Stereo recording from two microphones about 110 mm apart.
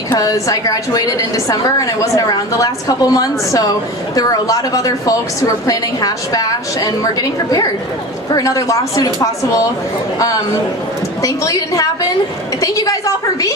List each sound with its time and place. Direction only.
0.1 s a woman's voice: 30° left (ahead or behind)
11.2 s a woman's voice: 30° left (ahead or behind)